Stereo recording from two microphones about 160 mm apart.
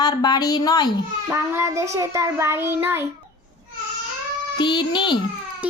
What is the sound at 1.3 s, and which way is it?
Child singing, 15° right (ahead or behind).